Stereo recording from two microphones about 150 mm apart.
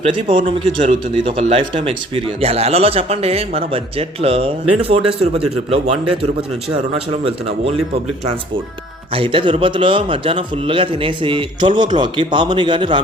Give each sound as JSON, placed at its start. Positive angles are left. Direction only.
{"t": 0.0, "sound": "a man's voice", "side_deg": -35}
{"t": 9.1, "sound": "a man's voice", "side_deg": -35}